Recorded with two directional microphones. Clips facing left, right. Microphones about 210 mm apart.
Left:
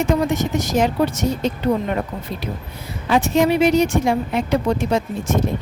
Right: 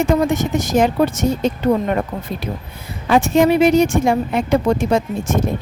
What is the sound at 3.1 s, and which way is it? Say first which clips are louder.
Speech: right 3 dB; 50° right (ahead or behind).